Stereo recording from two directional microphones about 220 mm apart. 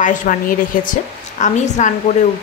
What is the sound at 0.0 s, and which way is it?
Speech, 35° left (ahead or behind).